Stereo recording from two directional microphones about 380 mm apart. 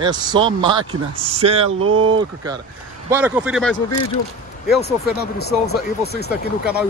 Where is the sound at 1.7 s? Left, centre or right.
Right.